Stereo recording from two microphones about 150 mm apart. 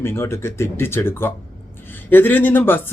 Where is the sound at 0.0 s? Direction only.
15° left (ahead or behind).